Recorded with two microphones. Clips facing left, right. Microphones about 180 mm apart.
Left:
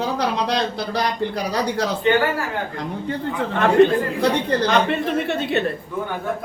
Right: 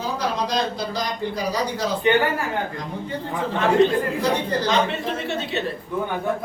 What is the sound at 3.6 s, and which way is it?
A man's voice, 65° left (ahead or behind).